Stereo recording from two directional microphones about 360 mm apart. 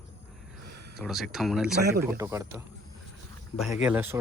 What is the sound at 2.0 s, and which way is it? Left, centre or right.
Speech, centre.